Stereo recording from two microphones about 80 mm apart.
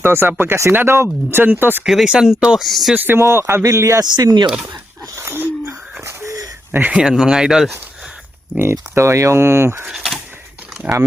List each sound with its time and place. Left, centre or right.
0.0 s speech: right
1.8 s speech: centre
2.9 s speech: right
4.0 s speech: right
5.1 s wheeze: right
6.7 s speech: right
7.0 s speech: centre
8.7 s speech: right
9.8 s speech: centre